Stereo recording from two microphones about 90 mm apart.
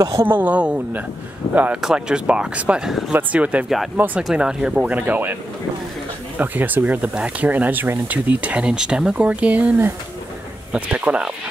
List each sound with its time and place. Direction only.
0.2 s speech: 20° right (ahead or behind)
1.8 s speech: 10° right (ahead or behind)
3.1 s speech: 15° right (ahead or behind)
4.2 s speech: 5° right (ahead or behind)